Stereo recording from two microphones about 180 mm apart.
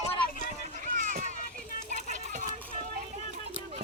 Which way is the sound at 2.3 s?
45° right (ahead or behind).